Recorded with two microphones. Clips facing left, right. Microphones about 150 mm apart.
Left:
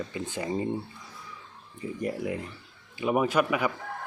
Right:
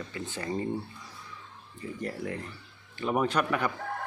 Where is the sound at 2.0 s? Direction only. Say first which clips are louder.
Left 4 dB; 15° left (ahead or behind).